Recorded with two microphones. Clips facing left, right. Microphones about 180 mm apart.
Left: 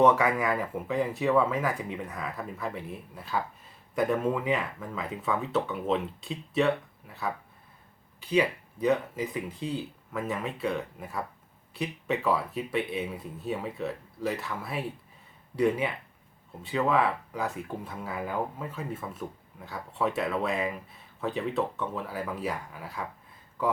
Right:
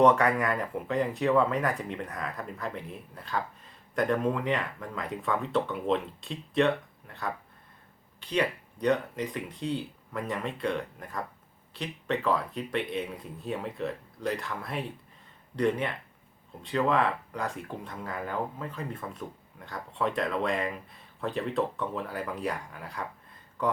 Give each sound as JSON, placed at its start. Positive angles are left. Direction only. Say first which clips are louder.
{"t": 0.0, "sound": "speech", "louder": "even", "side_deg": 5}